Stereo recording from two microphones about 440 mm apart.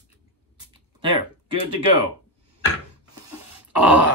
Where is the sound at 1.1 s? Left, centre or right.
Right.